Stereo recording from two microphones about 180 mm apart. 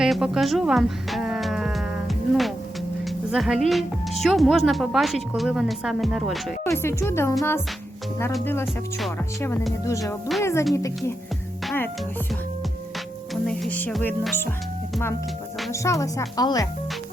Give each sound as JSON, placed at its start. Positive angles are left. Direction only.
{"t": 0.0, "sound": "music", "side_deg": 0}
{"t": 3.3, "sound": "a woman's voice", "side_deg": 0}
{"t": 6.7, "sound": "speech", "side_deg": 15}
{"t": 8.6, "sound": "a woman's voice", "side_deg": 0}
{"t": 9.4, "sound": "speech", "side_deg": 15}
{"t": 13.3, "sound": "speech", "side_deg": 0}
{"t": 15.7, "sound": "speech", "side_deg": 15}